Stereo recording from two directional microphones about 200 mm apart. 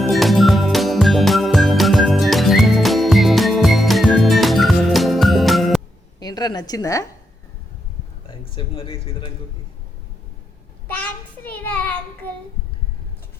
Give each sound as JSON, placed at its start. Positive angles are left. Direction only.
{"t": 0.0, "sound": "music", "side_deg": 0}
{"t": 6.1, "sound": "a sound", "side_deg": 20}
{"t": 8.3, "sound": "speech", "side_deg": 25}
{"t": 10.8, "sound": "child singing", "side_deg": 5}